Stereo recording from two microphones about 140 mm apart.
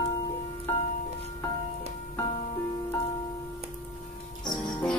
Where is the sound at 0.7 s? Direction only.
15° left (ahead or behind).